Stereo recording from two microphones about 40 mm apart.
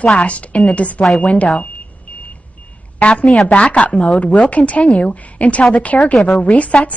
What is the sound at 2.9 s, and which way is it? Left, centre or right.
Speech, left.